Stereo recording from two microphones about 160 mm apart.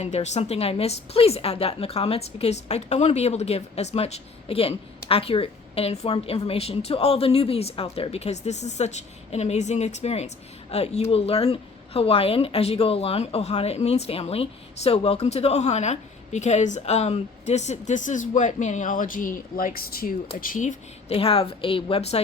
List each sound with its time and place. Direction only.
0.0 s a woman's voice: 45° left (ahead or behind); by 20.1 s 65° left (ahead or behind)
20.4 s speech: 55° left (ahead or behind)
21.1 s a woman's voice: 35° left (ahead or behind)